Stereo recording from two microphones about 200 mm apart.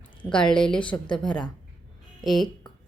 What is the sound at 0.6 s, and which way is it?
Speech, 25° left (ahead or behind).